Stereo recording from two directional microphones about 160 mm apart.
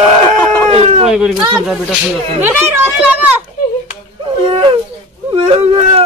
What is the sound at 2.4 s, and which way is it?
Speech, 10° right (ahead or behind).